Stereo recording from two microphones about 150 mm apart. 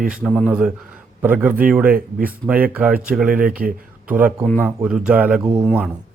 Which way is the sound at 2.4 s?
10° right (ahead or behind).